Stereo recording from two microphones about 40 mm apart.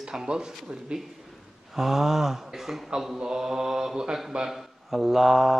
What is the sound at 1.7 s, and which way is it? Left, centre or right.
Speech, centre.